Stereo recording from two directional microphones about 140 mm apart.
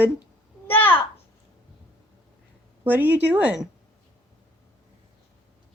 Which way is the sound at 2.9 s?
15° right (ahead or behind).